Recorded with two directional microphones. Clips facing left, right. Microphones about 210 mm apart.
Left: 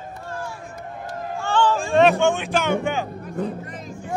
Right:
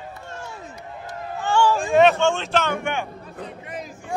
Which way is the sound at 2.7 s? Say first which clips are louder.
Left 3 dB; 35° left (ahead or behind).